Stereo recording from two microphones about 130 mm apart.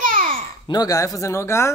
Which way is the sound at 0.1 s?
90° right.